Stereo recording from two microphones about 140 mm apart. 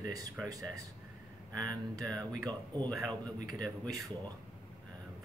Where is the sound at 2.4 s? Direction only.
30° right (ahead or behind).